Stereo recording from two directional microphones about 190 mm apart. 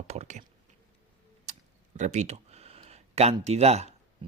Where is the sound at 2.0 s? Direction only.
40° right (ahead or behind).